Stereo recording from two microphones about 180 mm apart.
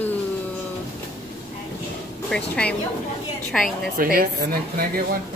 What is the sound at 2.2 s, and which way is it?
Speech, 5° left (ahead or behind).